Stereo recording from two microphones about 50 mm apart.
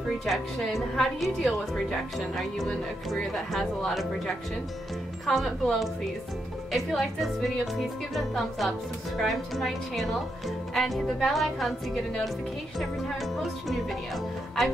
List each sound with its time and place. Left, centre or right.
0.2 s speech: centre